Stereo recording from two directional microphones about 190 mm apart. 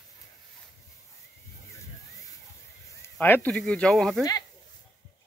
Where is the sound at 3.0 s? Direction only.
10° left (ahead or behind).